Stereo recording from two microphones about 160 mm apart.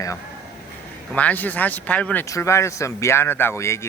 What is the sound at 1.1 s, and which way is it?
Speech, 10° left (ahead or behind).